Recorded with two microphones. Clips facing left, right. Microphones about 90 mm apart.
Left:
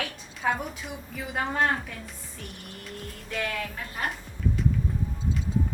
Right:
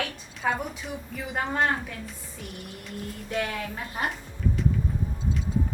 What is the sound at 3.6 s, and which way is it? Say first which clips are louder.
Speech: right 2 dB; 20° right (ahead or behind).